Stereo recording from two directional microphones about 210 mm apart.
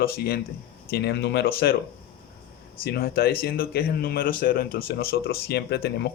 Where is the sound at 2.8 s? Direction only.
45° left (ahead or behind).